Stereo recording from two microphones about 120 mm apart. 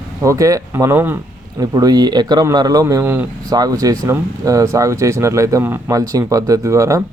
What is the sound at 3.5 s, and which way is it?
Speech, 35° right (ahead or behind).